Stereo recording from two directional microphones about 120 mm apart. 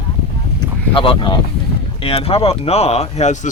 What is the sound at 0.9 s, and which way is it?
Speech, 45° left (ahead or behind).